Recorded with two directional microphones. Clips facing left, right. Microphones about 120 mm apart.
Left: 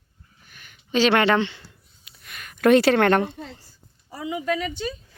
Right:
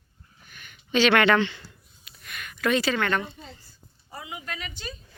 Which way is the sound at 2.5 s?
55° left (ahead or behind).